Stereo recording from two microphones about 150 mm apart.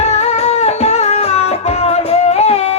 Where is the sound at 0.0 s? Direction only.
50° left (ahead or behind).